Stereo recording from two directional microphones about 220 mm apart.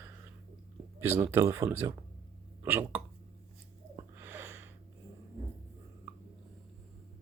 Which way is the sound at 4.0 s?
10° right (ahead or behind).